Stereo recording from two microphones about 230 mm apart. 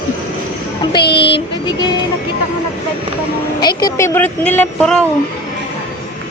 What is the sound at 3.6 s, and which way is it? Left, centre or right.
Speech, centre.